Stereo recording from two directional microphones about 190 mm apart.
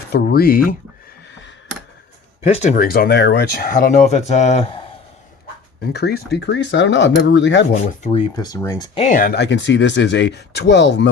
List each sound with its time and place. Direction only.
0.1 s speech: 55° left (ahead or behind)
2.4 s speech: 35° left (ahead or behind)
5.9 s speech: 60° left (ahead or behind)
8.4 s speech: 20° left (ahead or behind)
9.0 s speech: 45° left (ahead or behind); by 11.1 s 65° left (ahead or behind)